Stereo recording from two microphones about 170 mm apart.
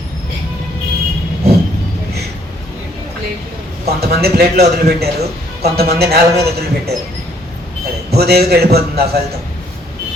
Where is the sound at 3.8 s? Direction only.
70° right (ahead or behind).